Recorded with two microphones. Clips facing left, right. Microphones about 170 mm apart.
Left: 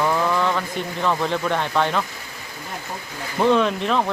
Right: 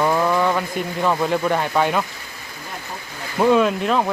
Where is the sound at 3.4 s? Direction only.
5° right (ahead or behind).